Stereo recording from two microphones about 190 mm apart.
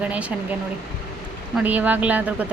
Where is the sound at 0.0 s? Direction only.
5° right (ahead or behind).